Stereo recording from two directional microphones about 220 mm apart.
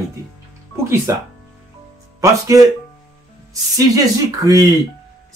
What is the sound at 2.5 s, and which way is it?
Speech, 15° right (ahead or behind).